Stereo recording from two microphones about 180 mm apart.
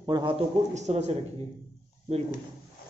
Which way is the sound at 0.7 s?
40° right (ahead or behind).